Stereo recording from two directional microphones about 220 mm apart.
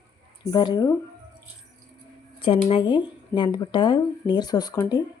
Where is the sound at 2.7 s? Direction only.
20° left (ahead or behind).